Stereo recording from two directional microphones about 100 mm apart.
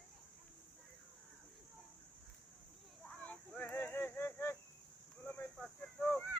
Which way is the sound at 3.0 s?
15° left (ahead or behind).